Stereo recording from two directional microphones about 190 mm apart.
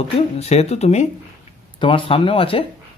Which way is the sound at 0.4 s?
35° left (ahead or behind).